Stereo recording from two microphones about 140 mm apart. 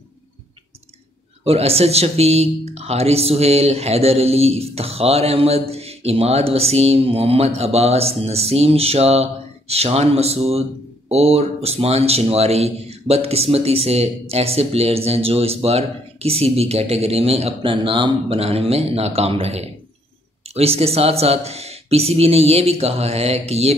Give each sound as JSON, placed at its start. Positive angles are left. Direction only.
{"t": 1.4, "sound": "speech", "side_deg": -45}